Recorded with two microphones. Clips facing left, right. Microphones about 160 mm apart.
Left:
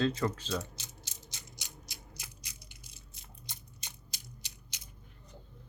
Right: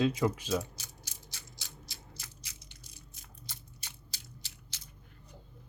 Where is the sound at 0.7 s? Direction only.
20° left (ahead or behind).